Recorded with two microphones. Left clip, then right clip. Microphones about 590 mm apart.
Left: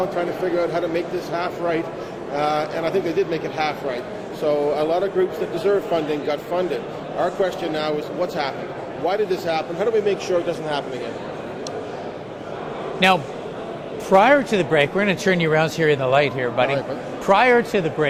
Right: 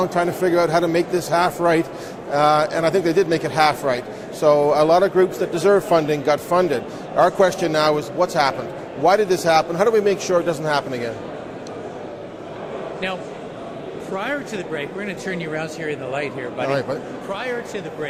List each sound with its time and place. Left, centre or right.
0.2 s a man's voice: right
14.2 s speech: left
17.3 s speech: left